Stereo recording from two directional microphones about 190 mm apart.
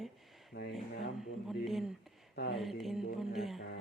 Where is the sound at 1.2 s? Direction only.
Centre (ahead or behind).